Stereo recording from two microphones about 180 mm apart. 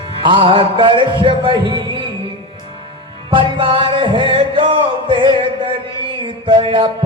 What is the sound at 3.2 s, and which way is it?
Music, 30° right (ahead or behind).